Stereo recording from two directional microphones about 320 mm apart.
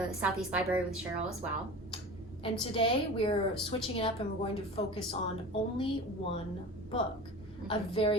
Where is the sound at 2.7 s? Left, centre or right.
Centre.